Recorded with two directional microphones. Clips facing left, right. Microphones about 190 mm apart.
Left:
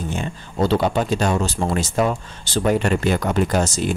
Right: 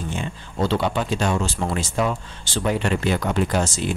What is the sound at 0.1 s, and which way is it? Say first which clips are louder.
Speech: left 3 dB; 40° left (ahead or behind).